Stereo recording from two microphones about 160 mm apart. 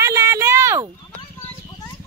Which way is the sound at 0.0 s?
20° right (ahead or behind).